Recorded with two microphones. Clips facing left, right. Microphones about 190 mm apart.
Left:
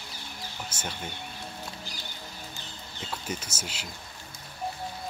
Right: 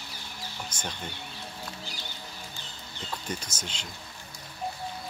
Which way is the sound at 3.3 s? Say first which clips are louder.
Left 1 dB; 5° left (ahead or behind).